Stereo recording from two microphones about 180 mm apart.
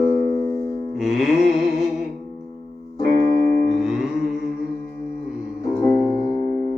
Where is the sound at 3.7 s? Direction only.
5° right (ahead or behind).